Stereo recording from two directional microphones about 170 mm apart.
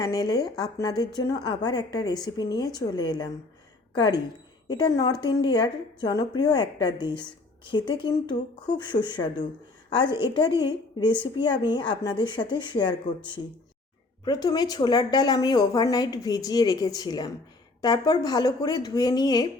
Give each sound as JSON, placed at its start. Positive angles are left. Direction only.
{"t": 0.0, "sound": "a woman's voice", "side_deg": 20}